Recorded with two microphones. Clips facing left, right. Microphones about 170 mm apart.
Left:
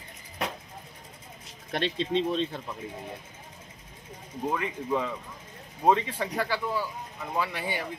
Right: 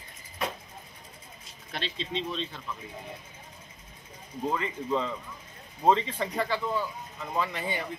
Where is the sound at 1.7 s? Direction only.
55° left (ahead or behind).